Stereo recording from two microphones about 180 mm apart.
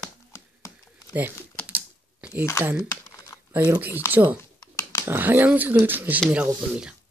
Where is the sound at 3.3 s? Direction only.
15° left (ahead or behind).